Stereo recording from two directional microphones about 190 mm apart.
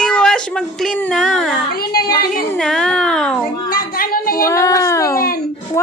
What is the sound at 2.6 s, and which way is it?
Speech, 5° left (ahead or behind).